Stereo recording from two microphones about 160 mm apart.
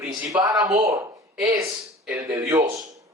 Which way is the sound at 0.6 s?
25° right (ahead or behind).